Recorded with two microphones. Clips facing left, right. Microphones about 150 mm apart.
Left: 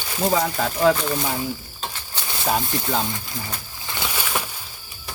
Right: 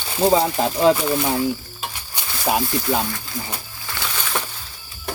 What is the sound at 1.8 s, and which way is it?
Sizzle, 10° right (ahead or behind).